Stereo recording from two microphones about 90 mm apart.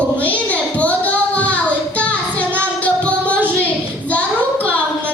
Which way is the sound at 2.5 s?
15° left (ahead or behind).